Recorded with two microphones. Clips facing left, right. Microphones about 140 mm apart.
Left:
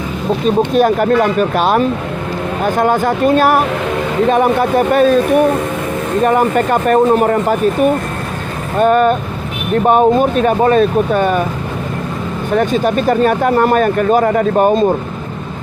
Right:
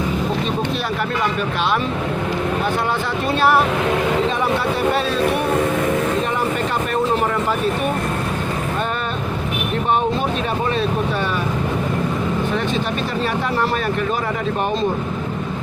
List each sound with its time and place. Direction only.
0.4 s speech: 45° left (ahead or behind)
6.2 s speech: 50° left (ahead or behind)
8.8 s speech: 45° left (ahead or behind)
12.5 s speech: 45° left (ahead or behind)